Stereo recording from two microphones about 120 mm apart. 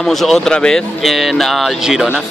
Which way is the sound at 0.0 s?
5° left (ahead or behind).